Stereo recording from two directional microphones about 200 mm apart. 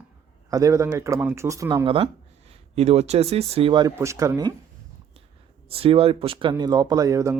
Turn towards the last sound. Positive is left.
turn(degrees=-15)  # may be behind; listen again after turning